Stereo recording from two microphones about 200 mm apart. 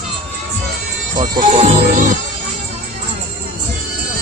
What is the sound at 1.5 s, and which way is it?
Music, 30° right (ahead or behind).